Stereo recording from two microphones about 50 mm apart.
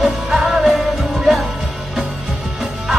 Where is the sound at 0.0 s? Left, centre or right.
Centre.